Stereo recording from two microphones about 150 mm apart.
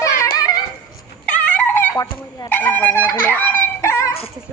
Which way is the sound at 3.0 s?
15° left (ahead or behind).